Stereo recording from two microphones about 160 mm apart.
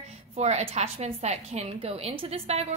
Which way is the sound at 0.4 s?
45° right (ahead or behind).